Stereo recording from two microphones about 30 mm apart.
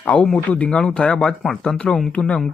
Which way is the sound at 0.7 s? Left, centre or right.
Left.